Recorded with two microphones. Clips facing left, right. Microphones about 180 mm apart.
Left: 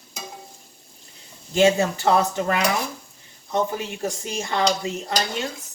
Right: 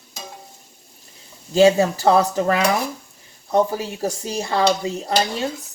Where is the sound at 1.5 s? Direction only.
35° right (ahead or behind).